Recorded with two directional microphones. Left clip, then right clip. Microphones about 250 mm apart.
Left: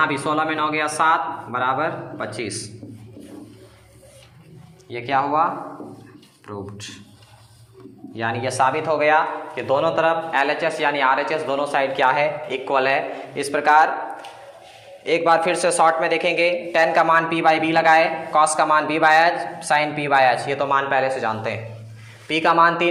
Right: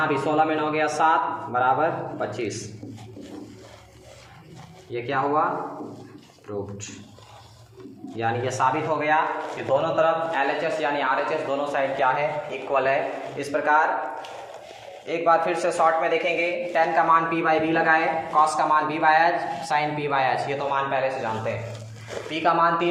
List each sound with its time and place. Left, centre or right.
0.0 s speech: left
4.9 s speech: left
8.1 s speech: left
15.0 s speech: left